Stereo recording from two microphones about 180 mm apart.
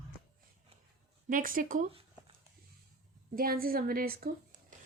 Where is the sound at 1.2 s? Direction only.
50° right (ahead or behind).